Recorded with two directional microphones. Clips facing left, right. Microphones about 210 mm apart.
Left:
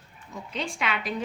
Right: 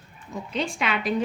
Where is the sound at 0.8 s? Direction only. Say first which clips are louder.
Right 1 dB; 25° right (ahead or behind).